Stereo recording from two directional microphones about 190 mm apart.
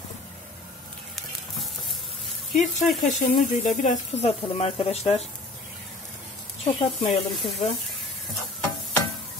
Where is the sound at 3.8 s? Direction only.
40° left (ahead or behind).